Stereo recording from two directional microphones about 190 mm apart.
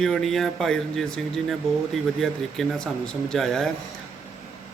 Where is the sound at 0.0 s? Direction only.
Centre (ahead or behind).